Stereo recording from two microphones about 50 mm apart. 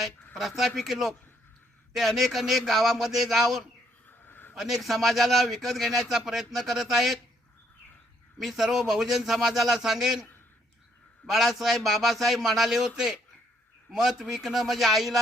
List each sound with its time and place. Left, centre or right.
0.3 s a man's voice: centre
4.3 s a sound: left
4.5 s a man's voice: centre
8.4 s a man's voice: centre
11.3 s a man's voice: centre